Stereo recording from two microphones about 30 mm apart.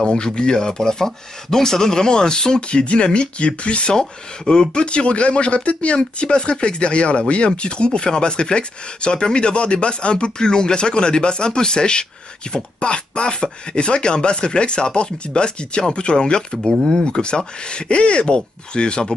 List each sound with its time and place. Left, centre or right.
0.0 s speech: left
2.7 s speech: left
4.5 s speech: left
4.8 s speech: left
5.9 s speech: left